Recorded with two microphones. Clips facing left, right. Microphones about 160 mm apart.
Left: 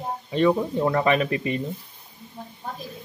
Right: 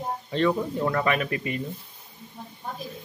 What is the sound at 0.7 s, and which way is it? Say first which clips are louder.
Speech: left 4 dB; 25° left (ahead or behind).